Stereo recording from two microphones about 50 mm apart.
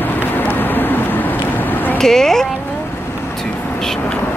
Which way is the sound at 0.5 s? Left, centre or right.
Left.